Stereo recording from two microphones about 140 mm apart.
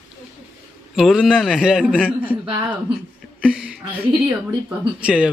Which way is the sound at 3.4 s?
5° right (ahead or behind).